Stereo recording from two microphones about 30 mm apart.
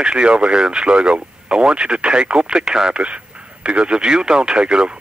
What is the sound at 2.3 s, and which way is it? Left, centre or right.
Speech, right.